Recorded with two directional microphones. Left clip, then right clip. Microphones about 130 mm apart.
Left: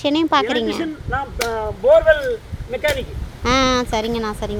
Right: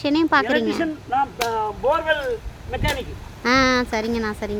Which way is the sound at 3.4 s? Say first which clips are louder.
Left 1 dB; 5° right (ahead or behind).